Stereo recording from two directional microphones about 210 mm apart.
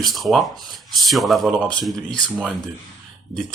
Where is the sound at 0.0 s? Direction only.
Centre (ahead or behind).